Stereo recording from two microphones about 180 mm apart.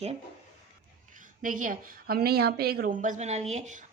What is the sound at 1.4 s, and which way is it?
A woman's voice, 50° right (ahead or behind).